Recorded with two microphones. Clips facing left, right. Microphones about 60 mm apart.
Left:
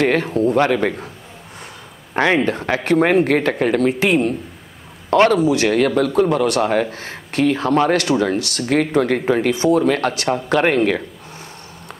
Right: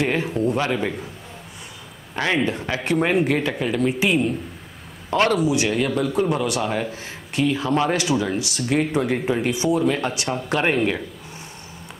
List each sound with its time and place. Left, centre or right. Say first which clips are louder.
0.0 s a man's voice: left 5 dB; left
2.1 s a man's voice: left 5 dB; left